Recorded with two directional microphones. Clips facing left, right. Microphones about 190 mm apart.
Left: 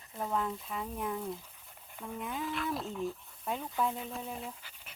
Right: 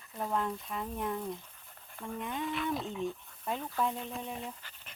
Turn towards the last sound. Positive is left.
turn(degrees=10)  # may be behind; listen again after turning